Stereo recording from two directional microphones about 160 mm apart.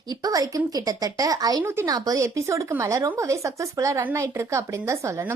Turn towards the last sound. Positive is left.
turn(degrees=-15)  # may be behind; listen again after turning